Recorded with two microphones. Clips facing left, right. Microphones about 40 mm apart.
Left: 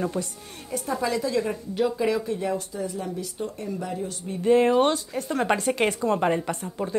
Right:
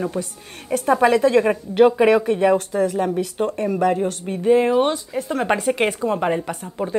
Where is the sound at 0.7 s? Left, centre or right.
Right.